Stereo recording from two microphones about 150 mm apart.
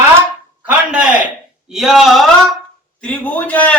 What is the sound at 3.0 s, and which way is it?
Speech, 10° left (ahead or behind).